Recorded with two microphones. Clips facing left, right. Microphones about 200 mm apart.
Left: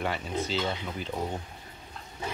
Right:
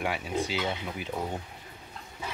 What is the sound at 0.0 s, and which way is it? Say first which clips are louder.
Speech: right 1 dB; 10° right (ahead or behind).